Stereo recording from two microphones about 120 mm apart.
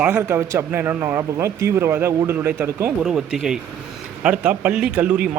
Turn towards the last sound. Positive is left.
turn(degrees=-10)  # may be behind; listen again after turning